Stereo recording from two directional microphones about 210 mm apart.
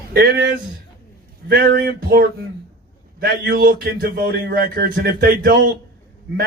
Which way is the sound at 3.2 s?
45° right (ahead or behind).